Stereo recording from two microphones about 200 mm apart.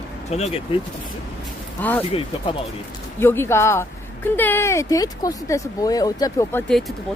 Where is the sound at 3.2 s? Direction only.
10° left (ahead or behind).